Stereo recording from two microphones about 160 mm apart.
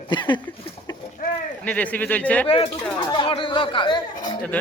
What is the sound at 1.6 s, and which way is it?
Speech, 10° left (ahead or behind).